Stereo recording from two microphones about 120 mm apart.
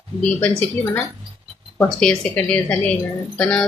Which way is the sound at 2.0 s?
5° left (ahead or behind).